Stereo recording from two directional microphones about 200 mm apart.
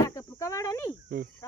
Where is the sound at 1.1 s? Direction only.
50° right (ahead or behind).